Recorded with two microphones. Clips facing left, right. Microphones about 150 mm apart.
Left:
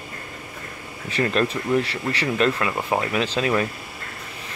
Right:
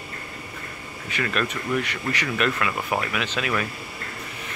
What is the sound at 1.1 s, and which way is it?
Speech, 30° left (ahead or behind).